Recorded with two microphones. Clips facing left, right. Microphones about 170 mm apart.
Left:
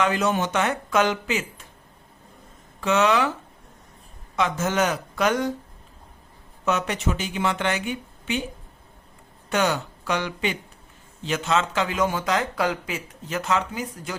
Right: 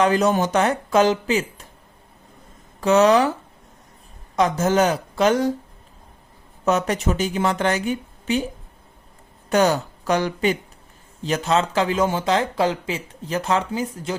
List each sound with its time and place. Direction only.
0.0 s speech: 35° right (ahead or behind)
2.8 s speech: 40° right (ahead or behind)
4.4 s speech: 40° right (ahead or behind)
6.7 s speech: 40° right (ahead or behind)
9.5 s speech: 40° right (ahead or behind)